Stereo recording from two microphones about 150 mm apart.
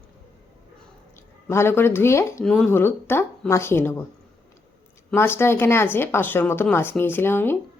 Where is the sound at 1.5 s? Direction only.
15° left (ahead or behind).